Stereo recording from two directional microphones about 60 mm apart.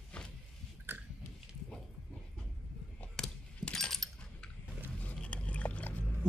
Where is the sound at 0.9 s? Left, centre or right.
Right.